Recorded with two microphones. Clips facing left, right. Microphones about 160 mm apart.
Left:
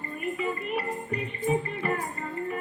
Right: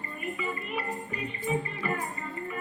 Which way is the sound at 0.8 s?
55° left (ahead or behind).